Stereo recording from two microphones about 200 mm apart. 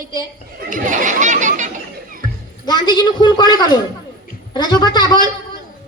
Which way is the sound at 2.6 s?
20° left (ahead or behind).